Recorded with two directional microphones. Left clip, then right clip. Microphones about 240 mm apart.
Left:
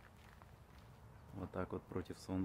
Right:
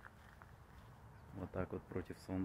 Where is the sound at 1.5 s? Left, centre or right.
Centre.